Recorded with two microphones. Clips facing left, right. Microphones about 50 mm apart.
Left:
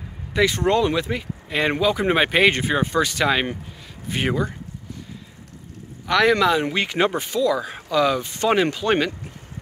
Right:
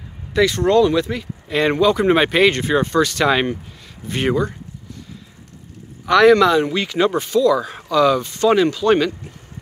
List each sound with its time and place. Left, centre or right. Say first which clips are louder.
0.3 s speech: right 4 dB; left
6.0 s a man's voice: right 6 dB; centre
6.3 s speech: right 5 dB; centre
6.7 s speech: right 3 dB; left
8.3 s speech: right 4 dB; left